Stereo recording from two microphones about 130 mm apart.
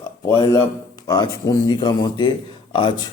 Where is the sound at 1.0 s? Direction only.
30° left (ahead or behind).